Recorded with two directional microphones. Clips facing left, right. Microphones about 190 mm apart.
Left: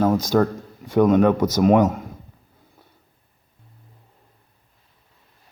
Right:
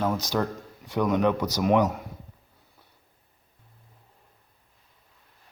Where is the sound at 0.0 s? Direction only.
50° left (ahead or behind).